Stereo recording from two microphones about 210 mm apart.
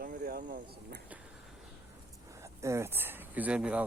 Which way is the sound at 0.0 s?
45° right (ahead or behind).